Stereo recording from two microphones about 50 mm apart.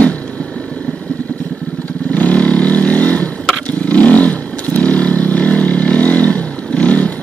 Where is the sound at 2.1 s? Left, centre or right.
Left.